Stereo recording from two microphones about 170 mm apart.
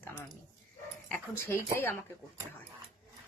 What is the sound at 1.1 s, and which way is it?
Speech, 15° left (ahead or behind).